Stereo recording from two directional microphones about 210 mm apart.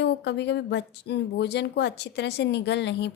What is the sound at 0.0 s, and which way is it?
A woman's voice, 55° left (ahead or behind).